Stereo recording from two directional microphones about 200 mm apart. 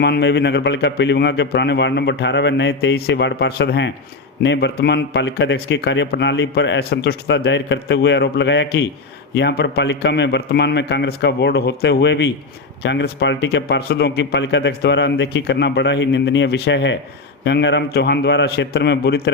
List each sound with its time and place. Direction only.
0.0 s speech: 55° left (ahead or behind)